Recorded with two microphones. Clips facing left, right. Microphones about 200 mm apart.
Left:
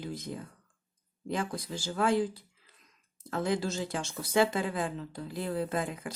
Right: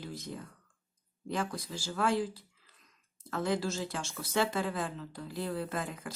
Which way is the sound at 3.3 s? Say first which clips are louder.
Left 1 dB; 15° left (ahead or behind).